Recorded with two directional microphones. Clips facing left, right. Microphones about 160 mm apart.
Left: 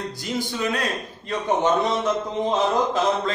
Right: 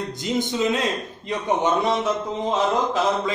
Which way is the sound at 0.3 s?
20° right (ahead or behind).